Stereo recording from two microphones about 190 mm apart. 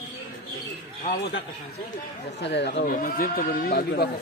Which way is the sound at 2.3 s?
65° left (ahead or behind).